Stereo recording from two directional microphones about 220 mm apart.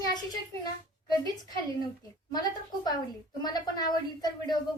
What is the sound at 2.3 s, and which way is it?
A woman's voice, 20° left (ahead or behind).